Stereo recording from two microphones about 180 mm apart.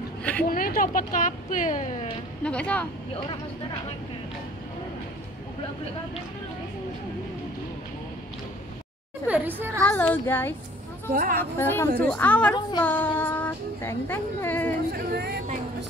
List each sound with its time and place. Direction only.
0.2 s a sound: 10° left (ahead or behind)
0.5 s speech: 50° left (ahead or behind)
2.4 s speech: 5° left (ahead or behind)
9.3 s a woman's voice: 10° right (ahead or behind)
9.9 s speech: 10° left (ahead or behind)
11.1 s speech: 50° right (ahead or behind)
11.5 s speech: 15° left (ahead or behind)
14.9 s speech: 65° right (ahead or behind)